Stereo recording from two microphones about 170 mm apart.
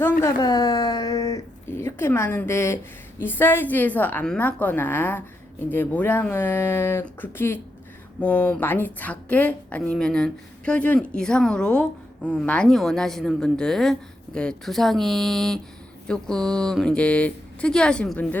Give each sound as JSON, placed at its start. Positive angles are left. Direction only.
{"t": 0.2, "sound": "a woman's voice", "side_deg": 20}